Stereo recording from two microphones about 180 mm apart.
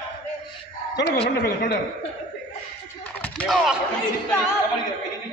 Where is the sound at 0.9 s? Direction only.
65° left (ahead or behind).